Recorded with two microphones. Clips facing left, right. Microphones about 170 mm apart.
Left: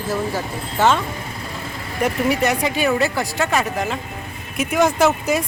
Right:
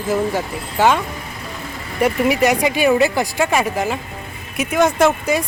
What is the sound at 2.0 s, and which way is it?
Speech, 10° right (ahead or behind).